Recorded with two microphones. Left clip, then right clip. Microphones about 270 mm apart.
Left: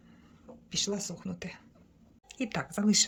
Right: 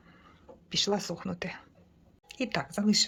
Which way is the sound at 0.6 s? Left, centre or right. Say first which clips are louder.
Right 4 dB; centre.